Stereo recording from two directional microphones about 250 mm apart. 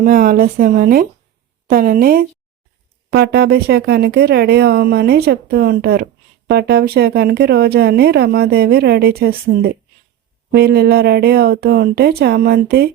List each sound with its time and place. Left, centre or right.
0.0 s speech: right
10.5 s speech: right